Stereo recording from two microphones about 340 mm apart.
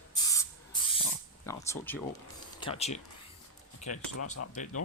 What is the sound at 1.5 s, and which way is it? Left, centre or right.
Speech, centre.